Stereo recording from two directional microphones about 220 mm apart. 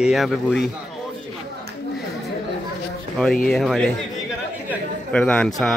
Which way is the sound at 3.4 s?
Centre (ahead or behind).